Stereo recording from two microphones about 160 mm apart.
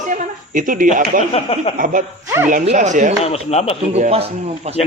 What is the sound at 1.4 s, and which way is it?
Speech, 35° left (ahead or behind).